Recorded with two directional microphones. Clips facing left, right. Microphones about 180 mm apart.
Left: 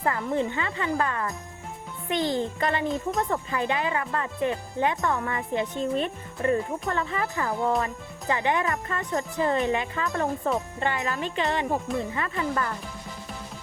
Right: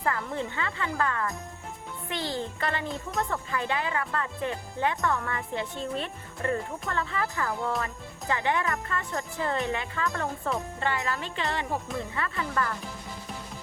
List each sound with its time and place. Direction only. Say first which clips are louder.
0.0 s a child's voice: left 4 dB; 20° left (ahead or behind)